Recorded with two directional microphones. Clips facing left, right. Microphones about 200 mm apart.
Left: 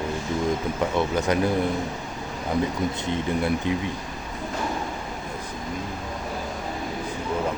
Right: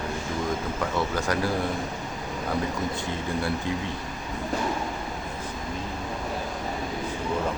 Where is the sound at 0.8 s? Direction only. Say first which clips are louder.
Left 4 dB; 20° left (ahead or behind).